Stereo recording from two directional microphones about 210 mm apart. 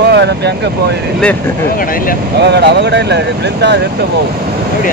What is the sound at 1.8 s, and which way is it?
Speech, 40° left (ahead or behind).